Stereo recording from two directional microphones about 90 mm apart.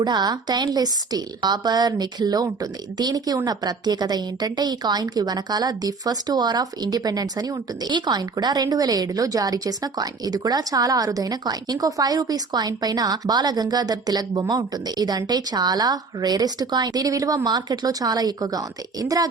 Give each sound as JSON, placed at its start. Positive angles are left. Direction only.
{"t": 0.0, "sound": "a woman's voice", "side_deg": -50}